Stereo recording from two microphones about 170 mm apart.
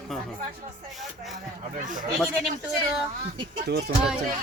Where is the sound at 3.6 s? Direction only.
75° right (ahead or behind).